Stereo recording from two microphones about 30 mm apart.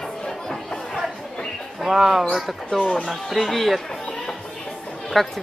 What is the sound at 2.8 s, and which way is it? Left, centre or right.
Speech, left.